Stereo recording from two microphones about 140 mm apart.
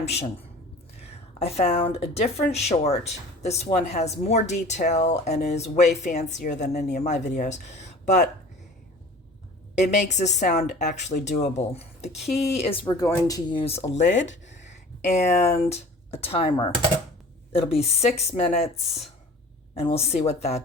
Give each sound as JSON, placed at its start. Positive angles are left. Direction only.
{"t": 0.0, "sound": "speech", "side_deg": 50}
{"t": 9.7, "sound": "speech", "side_deg": 55}
{"t": 13.6, "sound": "speech", "side_deg": 45}
{"t": 17.5, "sound": "speech", "side_deg": 45}